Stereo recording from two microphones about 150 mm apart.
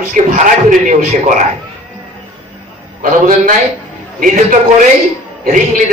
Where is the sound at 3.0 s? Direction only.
60° right (ahead or behind).